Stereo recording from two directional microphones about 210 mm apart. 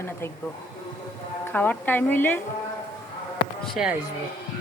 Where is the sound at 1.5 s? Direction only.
10° left (ahead or behind).